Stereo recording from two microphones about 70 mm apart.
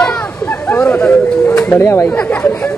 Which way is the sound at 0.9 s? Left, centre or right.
Centre.